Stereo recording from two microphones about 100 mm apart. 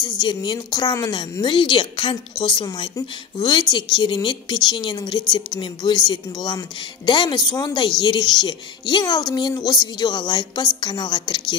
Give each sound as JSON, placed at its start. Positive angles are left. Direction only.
{"t": 0.0, "sound": "a woman's voice", "side_deg": 50}
{"t": 1.4, "sound": "a woman's voice", "side_deg": 50}